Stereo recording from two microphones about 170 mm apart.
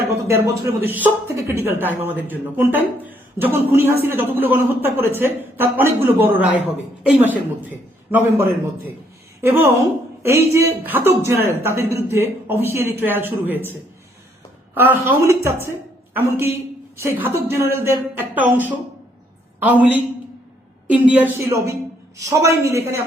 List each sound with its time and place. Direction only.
0.3 s a woman's voice: 15° right (ahead or behind)
14.8 s a woman's voice: 15° right (ahead or behind)
19.5 s a woman's voice: 10° right (ahead or behind)